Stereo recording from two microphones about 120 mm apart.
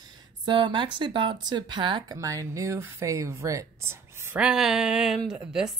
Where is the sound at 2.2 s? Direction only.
25° right (ahead or behind).